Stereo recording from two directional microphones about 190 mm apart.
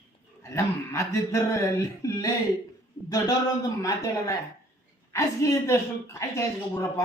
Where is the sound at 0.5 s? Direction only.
15° left (ahead or behind).